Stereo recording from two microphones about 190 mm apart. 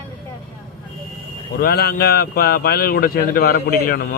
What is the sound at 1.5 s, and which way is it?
Speech, 55° left (ahead or behind).